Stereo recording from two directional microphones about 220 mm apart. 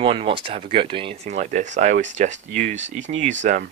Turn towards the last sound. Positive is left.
turn(degrees=-35)  # may be behind; listen again after turning